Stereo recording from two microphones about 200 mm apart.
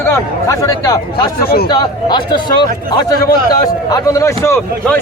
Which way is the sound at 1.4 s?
50° left (ahead or behind).